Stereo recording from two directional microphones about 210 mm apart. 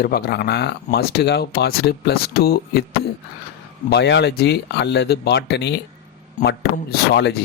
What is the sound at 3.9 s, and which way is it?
Speech, 55° left (ahead or behind).